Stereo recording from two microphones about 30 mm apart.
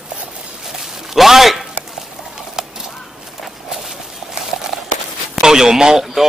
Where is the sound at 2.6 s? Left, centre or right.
Centre.